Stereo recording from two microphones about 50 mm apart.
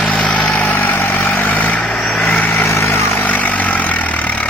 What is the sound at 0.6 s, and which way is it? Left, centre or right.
Vehicle, left.